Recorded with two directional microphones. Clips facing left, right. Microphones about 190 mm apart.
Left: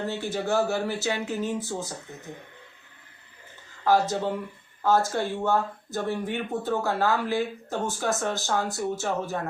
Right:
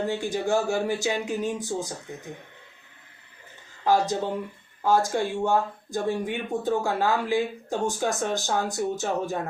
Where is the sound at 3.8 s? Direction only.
15° right (ahead or behind).